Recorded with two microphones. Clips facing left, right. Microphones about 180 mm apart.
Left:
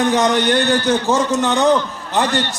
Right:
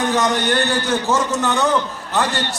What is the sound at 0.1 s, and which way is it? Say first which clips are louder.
A man's voice: left 3 dB; 15° left (ahead or behind).